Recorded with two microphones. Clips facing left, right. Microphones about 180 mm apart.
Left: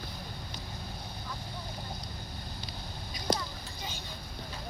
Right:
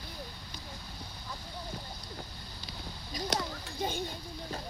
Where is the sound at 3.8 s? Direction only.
55° right (ahead or behind).